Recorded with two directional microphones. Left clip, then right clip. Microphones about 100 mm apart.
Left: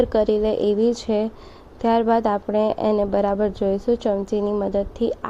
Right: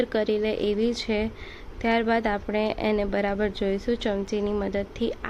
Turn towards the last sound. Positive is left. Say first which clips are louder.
# left 6 dB
turn(degrees=25)  # may be behind; listen again after turning